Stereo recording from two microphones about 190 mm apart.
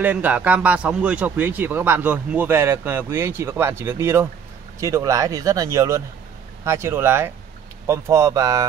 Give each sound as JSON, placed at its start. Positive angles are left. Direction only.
{"t": 0.0, "sound": "a man's voice", "side_deg": -10}